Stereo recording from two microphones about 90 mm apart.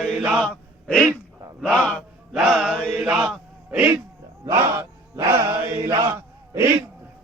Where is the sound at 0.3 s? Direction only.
10° left (ahead or behind).